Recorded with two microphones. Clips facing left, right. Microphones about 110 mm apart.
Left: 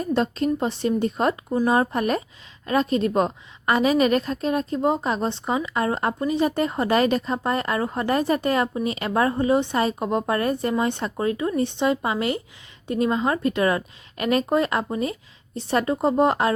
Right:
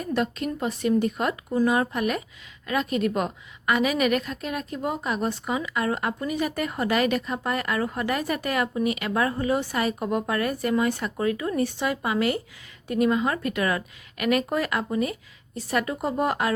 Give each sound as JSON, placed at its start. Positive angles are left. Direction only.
{"t": 0.0, "sound": "a woman's voice", "side_deg": 30}